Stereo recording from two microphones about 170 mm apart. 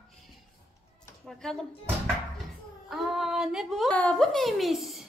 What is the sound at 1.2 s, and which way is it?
A woman's voice, centre (ahead or behind).